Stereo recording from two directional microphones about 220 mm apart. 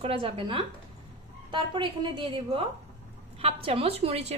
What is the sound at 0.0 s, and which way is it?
A woman's voice, 25° right (ahead or behind).